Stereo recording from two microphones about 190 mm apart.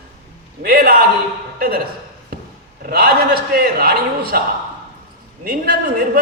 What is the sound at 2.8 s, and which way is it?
A man's voice, 55° right (ahead or behind).